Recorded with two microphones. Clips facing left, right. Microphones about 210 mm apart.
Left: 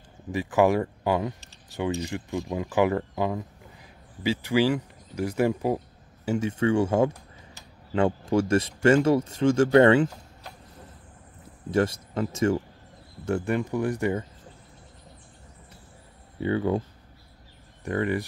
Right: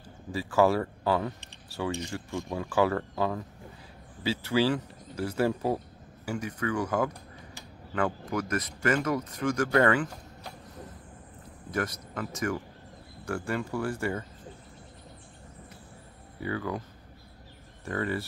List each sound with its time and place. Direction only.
0.3 s speech: 20° left (ahead or behind)
6.2 s speech: 25° left (ahead or behind)
11.7 s speech: 25° left (ahead or behind)
16.3 s speech: 25° left (ahead or behind)
17.8 s speech: 15° left (ahead or behind)